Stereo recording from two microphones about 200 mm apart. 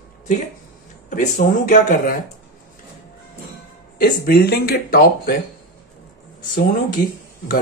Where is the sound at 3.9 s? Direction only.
50° left (ahead or behind).